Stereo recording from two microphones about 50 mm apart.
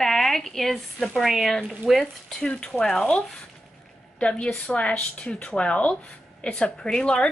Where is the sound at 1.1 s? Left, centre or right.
Centre.